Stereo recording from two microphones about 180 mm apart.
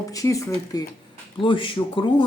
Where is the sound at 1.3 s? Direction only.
30° left (ahead or behind).